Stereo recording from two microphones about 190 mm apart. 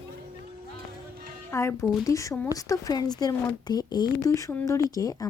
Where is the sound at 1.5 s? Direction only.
15° left (ahead or behind).